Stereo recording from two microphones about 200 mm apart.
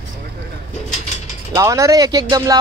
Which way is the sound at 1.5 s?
15° right (ahead or behind).